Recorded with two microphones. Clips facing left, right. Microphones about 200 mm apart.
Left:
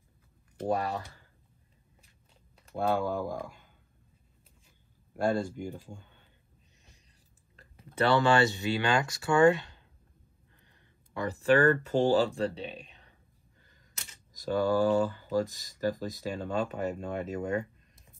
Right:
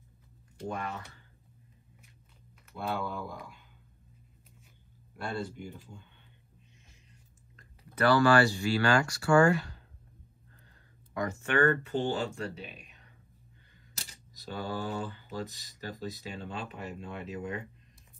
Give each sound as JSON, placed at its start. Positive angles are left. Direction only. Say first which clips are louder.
{"t": 0.7, "sound": "speech", "louder": "left 7 dB", "side_deg": 35}
{"t": 2.7, "sound": "speech", "louder": "left 6 dB", "side_deg": 45}
{"t": 5.1, "sound": "speech", "louder": "left 8 dB", "side_deg": 45}
{"t": 7.7, "sound": "speech", "louder": "even", "side_deg": 25}
{"t": 10.7, "sound": "speech", "louder": "right 2 dB", "side_deg": 30}
{"t": 14.3, "sound": "speech", "louder": "left 10 dB", "side_deg": 45}